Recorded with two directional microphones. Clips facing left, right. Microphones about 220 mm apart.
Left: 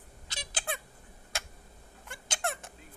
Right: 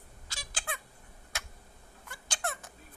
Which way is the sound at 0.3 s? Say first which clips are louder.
Left 4 dB; 20° left (ahead or behind).